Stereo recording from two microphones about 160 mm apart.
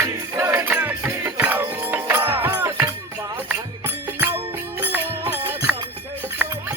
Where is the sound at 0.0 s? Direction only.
20° right (ahead or behind).